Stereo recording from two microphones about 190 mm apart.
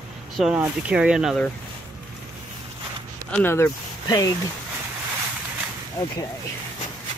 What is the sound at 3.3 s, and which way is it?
Speech, 10° left (ahead or behind).